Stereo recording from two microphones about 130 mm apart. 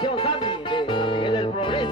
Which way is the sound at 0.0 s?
40° left (ahead or behind).